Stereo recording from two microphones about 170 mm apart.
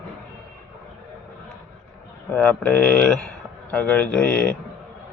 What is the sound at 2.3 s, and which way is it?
Speech, 10° left (ahead or behind).